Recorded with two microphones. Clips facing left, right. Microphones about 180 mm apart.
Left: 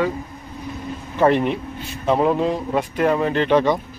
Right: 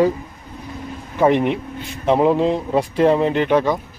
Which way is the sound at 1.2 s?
15° right (ahead or behind).